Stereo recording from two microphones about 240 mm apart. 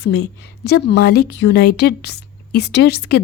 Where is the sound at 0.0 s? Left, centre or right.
Left.